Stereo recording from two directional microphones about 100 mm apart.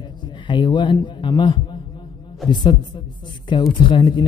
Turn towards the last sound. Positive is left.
turn(degrees=55)  # may be behind; listen again after turning